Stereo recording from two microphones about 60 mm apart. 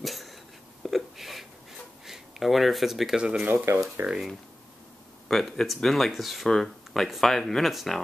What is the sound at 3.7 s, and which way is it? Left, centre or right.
Speech, right.